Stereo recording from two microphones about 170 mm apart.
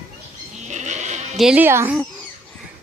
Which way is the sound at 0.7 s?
45° right (ahead or behind).